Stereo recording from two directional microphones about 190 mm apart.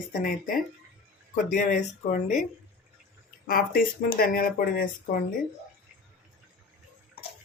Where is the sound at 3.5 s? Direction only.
50° left (ahead or behind).